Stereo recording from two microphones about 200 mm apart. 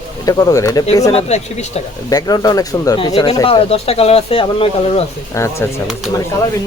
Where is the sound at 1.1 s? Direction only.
30° left (ahead or behind).